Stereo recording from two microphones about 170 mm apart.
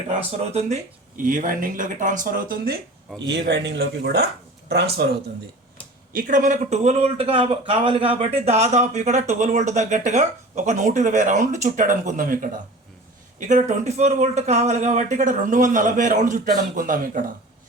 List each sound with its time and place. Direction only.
0.3 s speech: 40° right (ahead or behind); by 2.7 s 60° right (ahead or behind)
3.2 s speech: 90° right; by 5.1 s 75° right (ahead or behind)
6.1 s speech: 50° right (ahead or behind)